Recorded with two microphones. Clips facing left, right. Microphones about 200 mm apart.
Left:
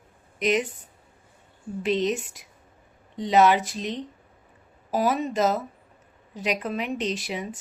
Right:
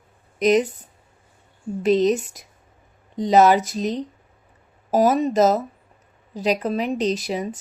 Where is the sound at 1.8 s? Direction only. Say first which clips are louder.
Right 7 dB; 40° right (ahead or behind).